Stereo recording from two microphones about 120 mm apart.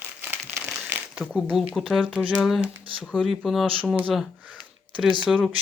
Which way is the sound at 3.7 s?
15° right (ahead or behind).